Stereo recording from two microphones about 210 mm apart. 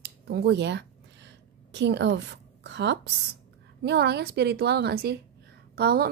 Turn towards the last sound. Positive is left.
turn(degrees=-45)  # may be behind; listen again after turning